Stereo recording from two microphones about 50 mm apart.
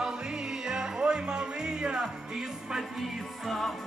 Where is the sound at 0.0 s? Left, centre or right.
Centre.